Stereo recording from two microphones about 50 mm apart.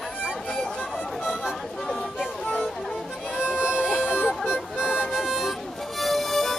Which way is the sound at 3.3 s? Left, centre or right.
Centre.